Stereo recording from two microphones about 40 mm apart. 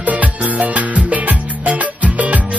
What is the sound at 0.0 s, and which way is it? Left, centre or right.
Music, right.